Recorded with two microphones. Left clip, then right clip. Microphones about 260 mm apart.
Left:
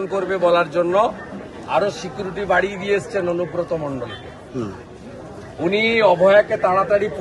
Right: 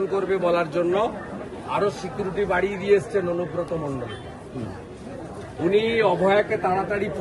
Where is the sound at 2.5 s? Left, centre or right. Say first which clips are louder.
Left 1 dB; centre.